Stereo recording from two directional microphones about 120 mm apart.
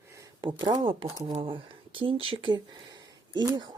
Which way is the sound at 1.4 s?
45° right (ahead or behind).